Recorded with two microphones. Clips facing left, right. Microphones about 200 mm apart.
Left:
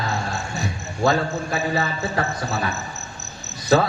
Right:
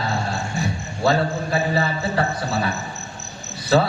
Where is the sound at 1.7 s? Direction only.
35° right (ahead or behind).